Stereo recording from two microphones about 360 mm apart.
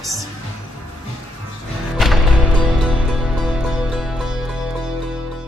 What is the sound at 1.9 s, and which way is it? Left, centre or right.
Music, centre.